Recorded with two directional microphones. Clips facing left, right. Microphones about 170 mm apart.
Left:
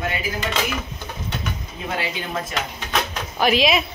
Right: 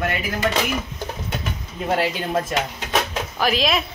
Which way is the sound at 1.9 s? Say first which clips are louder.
Right 6 dB; 45° right (ahead or behind).